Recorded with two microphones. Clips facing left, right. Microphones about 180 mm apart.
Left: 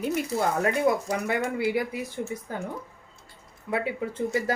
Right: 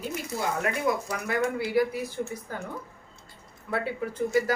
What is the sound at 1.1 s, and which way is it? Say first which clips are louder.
Speech: left 1 dB; 20° left (ahead or behind).